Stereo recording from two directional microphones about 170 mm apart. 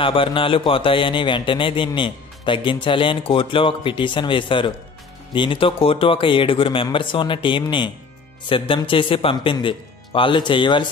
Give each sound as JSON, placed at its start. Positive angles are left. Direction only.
{"t": 0.0, "sound": "a man's voice", "side_deg": 30}